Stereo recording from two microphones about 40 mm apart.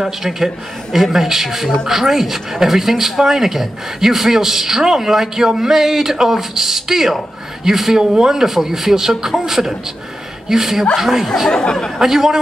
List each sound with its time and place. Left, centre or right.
0.0 s speech: centre
11.5 s speech: centre
12.0 s speech: centre